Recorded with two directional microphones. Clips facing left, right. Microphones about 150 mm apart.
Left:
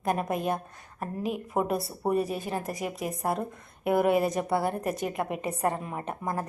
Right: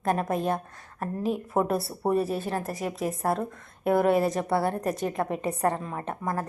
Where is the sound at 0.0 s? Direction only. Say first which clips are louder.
Right 2 dB; 15° left (ahead or behind).